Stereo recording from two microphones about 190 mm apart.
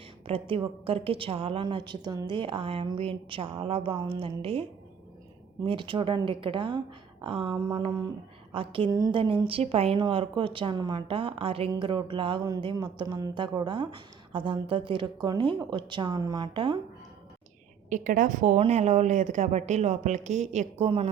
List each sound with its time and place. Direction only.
0.3 s a woman's voice: 30° right (ahead or behind)
5.6 s a woman's voice: 25° right (ahead or behind)
17.8 s speech: 45° right (ahead or behind)